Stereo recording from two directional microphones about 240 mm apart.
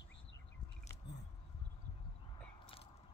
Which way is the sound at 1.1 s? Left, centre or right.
Left.